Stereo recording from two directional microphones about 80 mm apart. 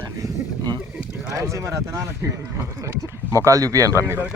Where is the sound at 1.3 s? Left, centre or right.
Right.